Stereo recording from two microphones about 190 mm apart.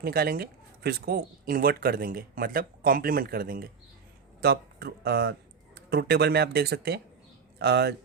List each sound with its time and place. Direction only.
0.0 s a man's voice: 55° right (ahead or behind)